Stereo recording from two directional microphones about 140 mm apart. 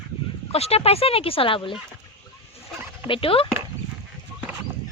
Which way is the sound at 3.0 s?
40° left (ahead or behind).